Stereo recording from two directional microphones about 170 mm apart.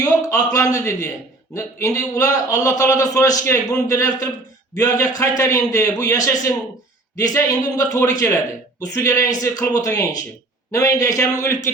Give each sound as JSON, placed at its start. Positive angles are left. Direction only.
{"t": 0.0, "sound": "a man's voice", "side_deg": 20}